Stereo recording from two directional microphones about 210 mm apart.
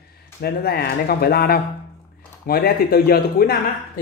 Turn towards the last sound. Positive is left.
turn(degrees=45)  # may be behind; listen again after turning